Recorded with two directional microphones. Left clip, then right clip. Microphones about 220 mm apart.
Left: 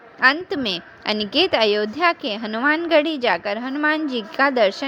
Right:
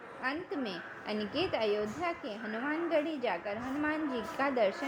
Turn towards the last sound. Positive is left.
turn(degrees=30)  # may be behind; listen again after turning